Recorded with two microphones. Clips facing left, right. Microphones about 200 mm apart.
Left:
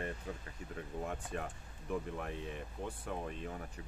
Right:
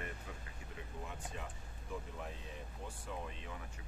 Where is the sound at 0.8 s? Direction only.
50° left (ahead or behind).